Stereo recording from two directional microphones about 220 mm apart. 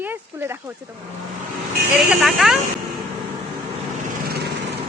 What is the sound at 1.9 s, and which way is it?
Speech, 5° right (ahead or behind).